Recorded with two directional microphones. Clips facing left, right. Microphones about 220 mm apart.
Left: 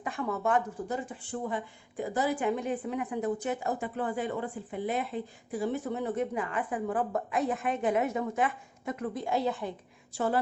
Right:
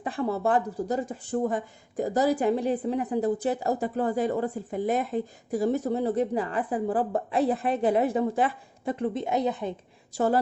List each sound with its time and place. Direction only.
0.0 s speech: 35° right (ahead or behind)
10.2 s speech: 40° right (ahead or behind)